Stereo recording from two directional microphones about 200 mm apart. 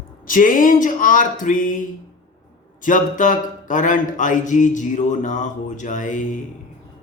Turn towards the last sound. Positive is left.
turn(degrees=40)  # may be behind; listen again after turning